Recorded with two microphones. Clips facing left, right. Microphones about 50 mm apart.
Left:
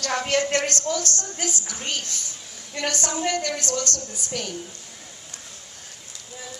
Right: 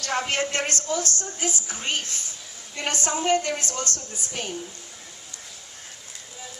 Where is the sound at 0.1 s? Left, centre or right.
Right.